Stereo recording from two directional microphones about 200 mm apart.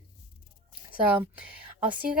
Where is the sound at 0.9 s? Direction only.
10° right (ahead or behind).